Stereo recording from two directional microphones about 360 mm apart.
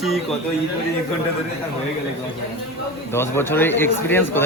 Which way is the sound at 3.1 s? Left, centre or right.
Centre.